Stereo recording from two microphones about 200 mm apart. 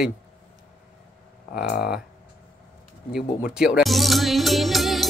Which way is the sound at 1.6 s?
55° left (ahead or behind).